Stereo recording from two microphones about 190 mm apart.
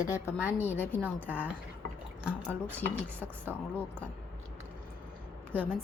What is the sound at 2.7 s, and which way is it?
Speech, 10° left (ahead or behind).